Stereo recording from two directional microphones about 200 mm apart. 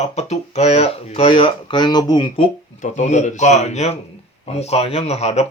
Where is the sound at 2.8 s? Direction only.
35° left (ahead or behind).